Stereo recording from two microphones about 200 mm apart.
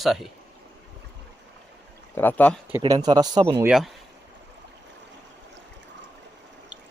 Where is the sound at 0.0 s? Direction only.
Centre (ahead or behind).